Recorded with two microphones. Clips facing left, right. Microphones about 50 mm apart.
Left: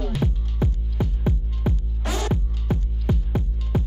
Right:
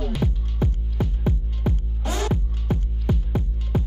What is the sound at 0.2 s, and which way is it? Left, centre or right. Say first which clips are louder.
Music: even; centre.